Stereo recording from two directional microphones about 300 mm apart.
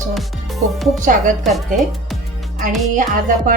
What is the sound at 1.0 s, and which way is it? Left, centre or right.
Music, right.